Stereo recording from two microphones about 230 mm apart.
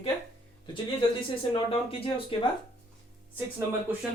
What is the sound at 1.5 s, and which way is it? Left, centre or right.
Speech, left.